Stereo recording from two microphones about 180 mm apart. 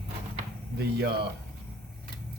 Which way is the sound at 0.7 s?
65° right (ahead or behind).